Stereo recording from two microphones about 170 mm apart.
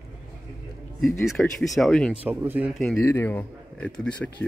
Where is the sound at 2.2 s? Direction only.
10° right (ahead or behind).